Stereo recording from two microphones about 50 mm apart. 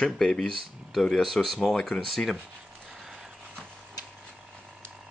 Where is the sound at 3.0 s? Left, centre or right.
Centre.